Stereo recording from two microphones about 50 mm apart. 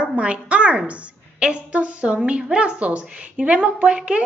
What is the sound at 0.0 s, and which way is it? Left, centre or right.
A woman's voice, right.